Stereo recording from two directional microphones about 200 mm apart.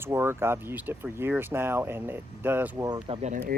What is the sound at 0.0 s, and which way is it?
Speech, 10° right (ahead or behind).